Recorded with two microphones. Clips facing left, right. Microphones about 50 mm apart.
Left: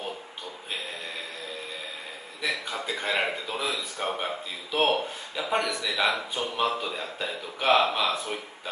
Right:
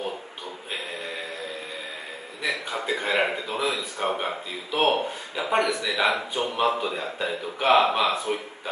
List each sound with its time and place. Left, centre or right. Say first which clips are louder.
2.4 s speech: right 2 dB; centre
5.3 s a man's voice: right 4 dB; centre